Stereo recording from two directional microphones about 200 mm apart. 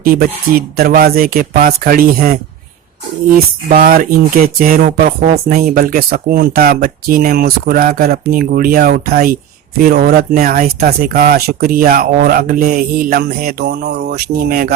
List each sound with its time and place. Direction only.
0.0 s speech: 45° right (ahead or behind)